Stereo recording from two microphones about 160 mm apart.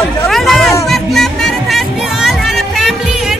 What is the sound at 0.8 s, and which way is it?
Music, centre (ahead or behind).